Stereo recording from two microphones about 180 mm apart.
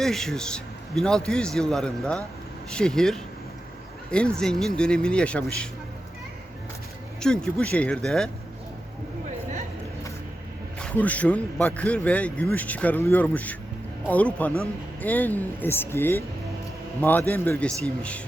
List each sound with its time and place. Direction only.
0.0 s a man's voice: centre (ahead or behind)
7.2 s a man's voice: 5° left (ahead or behind)
10.8 s speech: 5° left (ahead or behind)
17.7 s speech: 15° right (ahead or behind)